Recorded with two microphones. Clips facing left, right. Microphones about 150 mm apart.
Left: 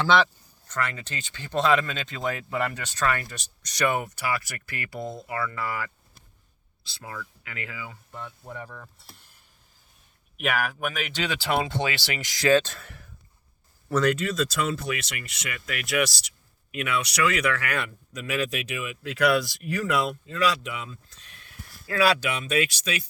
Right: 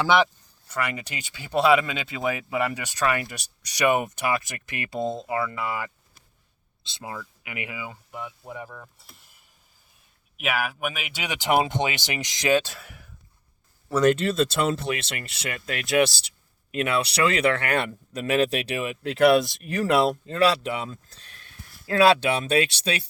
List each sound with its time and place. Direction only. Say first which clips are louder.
0.0 s speech: right 1 dB; 15° right (ahead or behind)
10.3 s speech: even; 5° right (ahead or behind)
12.7 s speech: even; centre (ahead or behind)
14.0 s speech: right 5 dB; 25° right (ahead or behind)